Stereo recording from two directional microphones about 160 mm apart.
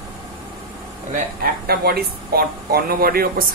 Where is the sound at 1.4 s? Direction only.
70° right (ahead or behind).